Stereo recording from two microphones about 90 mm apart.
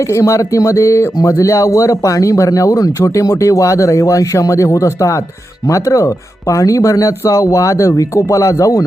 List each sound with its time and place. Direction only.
0.1 s speech: 35° left (ahead or behind)